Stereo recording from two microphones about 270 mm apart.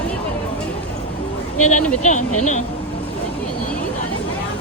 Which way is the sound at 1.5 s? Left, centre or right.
Left.